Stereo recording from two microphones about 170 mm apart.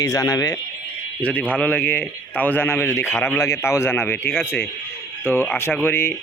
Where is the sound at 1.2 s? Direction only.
10° left (ahead or behind).